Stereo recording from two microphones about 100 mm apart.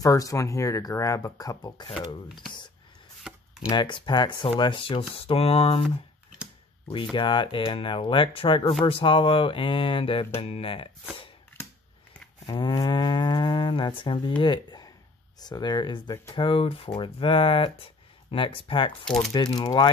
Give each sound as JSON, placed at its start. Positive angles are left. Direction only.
{"t": 0.0, "sound": "speech", "side_deg": 35}
{"t": 2.3, "sound": "speech", "side_deg": 50}
{"t": 3.3, "sound": "a sound", "side_deg": -10}
{"t": 3.7, "sound": "moo", "side_deg": 50}
{"t": 4.6, "sound": "speech", "side_deg": 55}
{"t": 6.9, "sound": "speech", "side_deg": 55}
{"t": 12.4, "sound": "moo", "side_deg": 55}
{"t": 16.4, "sound": "speech", "side_deg": 65}
{"t": 19.3, "sound": "moo", "side_deg": 40}